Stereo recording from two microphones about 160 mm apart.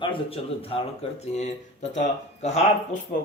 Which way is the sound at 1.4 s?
50° left (ahead or behind).